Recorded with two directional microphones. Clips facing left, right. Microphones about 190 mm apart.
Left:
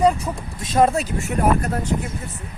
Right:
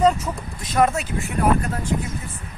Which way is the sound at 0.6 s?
25° left (ahead or behind).